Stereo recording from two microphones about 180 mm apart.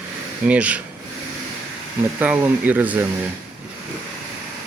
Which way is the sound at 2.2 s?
10° right (ahead or behind).